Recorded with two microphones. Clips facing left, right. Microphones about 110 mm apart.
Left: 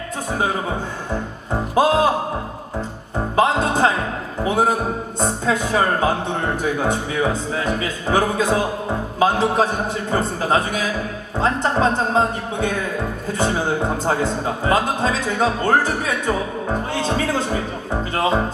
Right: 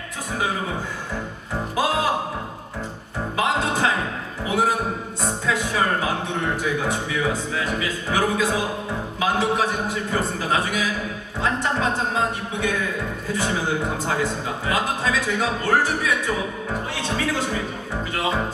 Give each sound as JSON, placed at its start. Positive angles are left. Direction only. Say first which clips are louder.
{"t": 1.7, "sound": "music", "louder": "left 7 dB", "side_deg": 35}
{"t": 3.3, "sound": "music", "louder": "left 5 dB", "side_deg": 35}
{"t": 5.2, "sound": "speech", "louder": "left 4 dB", "side_deg": 35}